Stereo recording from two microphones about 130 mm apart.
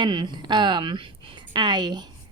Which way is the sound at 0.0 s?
35° right (ahead or behind).